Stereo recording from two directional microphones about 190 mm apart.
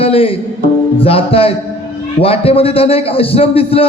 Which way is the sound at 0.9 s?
30° left (ahead or behind).